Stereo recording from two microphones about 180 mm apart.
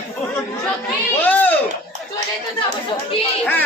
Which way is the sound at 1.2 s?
10° left (ahead or behind).